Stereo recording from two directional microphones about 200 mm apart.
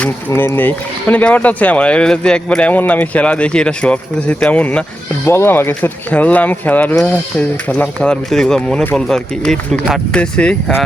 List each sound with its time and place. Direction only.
0.0 s speech: 10° left (ahead or behind)